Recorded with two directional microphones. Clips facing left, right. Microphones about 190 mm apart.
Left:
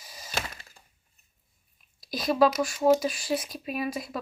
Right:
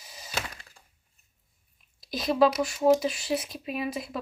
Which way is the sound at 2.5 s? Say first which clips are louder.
Even; 20° right (ahead or behind).